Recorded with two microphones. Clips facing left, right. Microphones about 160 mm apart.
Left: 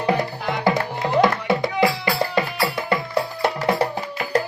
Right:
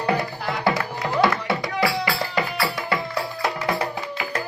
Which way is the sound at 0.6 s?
20° left (ahead or behind).